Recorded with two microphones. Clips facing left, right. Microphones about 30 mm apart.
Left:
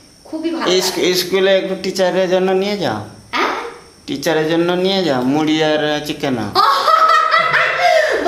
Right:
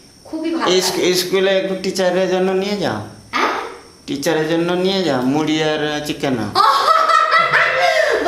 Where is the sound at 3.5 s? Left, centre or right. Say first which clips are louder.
Even; centre.